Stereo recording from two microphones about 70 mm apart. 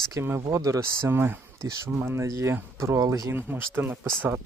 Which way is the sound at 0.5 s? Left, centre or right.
Right.